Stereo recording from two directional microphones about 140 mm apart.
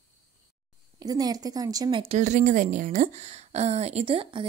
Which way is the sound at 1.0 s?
25° right (ahead or behind).